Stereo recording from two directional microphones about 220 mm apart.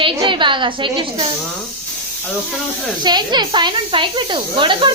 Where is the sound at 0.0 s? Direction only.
20° right (ahead or behind).